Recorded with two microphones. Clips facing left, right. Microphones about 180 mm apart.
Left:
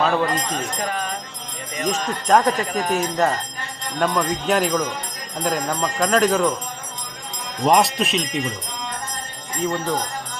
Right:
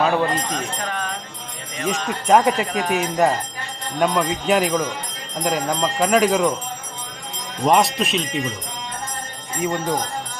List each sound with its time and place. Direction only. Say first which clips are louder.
0.0 s speech: right 1 dB; 10° right (ahead or behind)
0.5 s speech: left 1 dB; 5° left (ahead or behind)
1.9 s speech: right 1 dB; 10° right (ahead or behind)
7.6 s speech: even; centre (ahead or behind)
9.6 s speech: right 1 dB; 15° right (ahead or behind)